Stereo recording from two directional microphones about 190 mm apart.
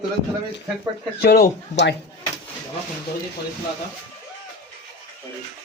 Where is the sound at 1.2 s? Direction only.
55° left (ahead or behind).